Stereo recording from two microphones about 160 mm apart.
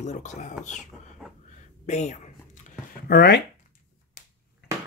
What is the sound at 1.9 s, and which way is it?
Speech, 45° left (ahead or behind).